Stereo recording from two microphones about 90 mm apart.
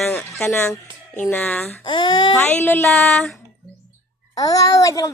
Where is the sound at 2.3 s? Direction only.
20° left (ahead or behind).